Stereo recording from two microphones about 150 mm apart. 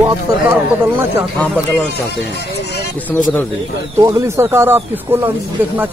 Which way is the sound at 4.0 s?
20° right (ahead or behind).